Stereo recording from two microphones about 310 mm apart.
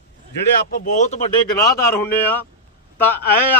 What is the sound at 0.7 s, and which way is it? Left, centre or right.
Speech, left.